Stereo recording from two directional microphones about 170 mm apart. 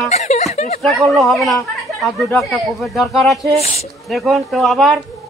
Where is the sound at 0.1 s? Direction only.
40° left (ahead or behind).